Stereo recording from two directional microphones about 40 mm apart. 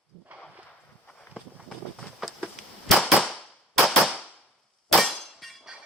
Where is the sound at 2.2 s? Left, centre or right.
Centre.